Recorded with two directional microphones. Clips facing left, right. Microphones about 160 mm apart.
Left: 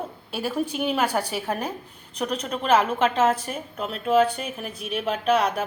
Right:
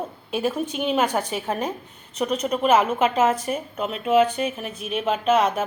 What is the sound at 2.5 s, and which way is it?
A woman's voice, 5° right (ahead or behind).